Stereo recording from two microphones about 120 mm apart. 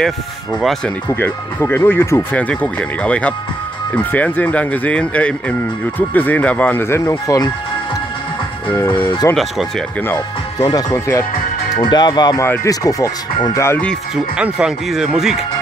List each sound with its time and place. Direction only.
0.6 s speech: centre (ahead or behind)
1.0 s speech: 20° left (ahead or behind)
8.7 s speech: 15° left (ahead or behind)
9.3 s speech: centre (ahead or behind)
10.7 s speech: 30° left (ahead or behind)
14.1 s speech: 5° right (ahead or behind)